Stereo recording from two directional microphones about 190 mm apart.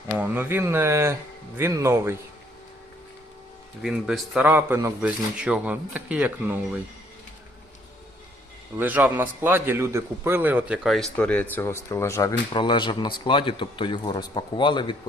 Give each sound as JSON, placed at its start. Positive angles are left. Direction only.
{"t": 0.2, "sound": "speech", "side_deg": -10}
{"t": 3.8, "sound": "speech", "side_deg": 0}
{"t": 8.8, "sound": "speech", "side_deg": -10}